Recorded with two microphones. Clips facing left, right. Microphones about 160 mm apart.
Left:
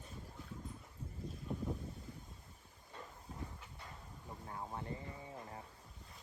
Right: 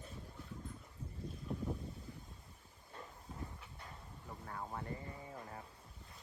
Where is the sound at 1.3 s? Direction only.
Centre (ahead or behind).